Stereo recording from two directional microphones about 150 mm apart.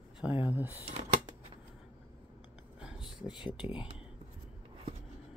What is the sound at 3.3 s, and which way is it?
Speech, 30° left (ahead or behind).